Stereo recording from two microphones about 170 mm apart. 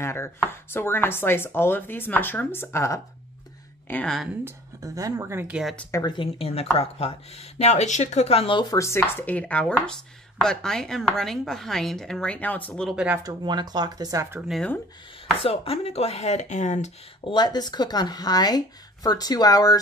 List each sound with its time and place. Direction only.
0.0 s a woman's voice: 15° left (ahead or behind)
4.5 s speech: 20° right (ahead or behind)
5.9 s speech: 15° left (ahead or behind)
6.1 s speech: 35° left (ahead or behind); by 12.9 s 5° left (ahead or behind)
12.9 s speech: 5° right (ahead or behind)
13.2 s speech: 25° right (ahead or behind)
14.5 s speech: 5° left (ahead or behind)
15.4 s speech: 35° left (ahead or behind)
17.3 s speech: 25° left (ahead or behind)